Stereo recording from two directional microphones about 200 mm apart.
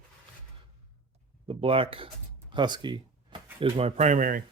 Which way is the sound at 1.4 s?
30° right (ahead or behind).